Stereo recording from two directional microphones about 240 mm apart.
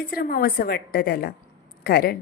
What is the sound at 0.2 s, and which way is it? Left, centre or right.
A woman's voice, left.